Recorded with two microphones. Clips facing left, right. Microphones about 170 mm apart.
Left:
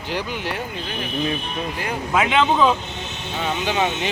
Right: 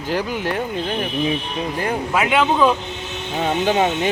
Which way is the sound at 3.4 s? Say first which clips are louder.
Right 4 dB; 45° right (ahead or behind).